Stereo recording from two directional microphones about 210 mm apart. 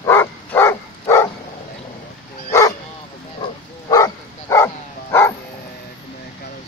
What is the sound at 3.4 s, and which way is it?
Dog, 15° left (ahead or behind).